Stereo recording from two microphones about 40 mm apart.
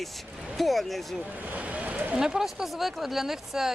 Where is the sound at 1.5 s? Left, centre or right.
Right.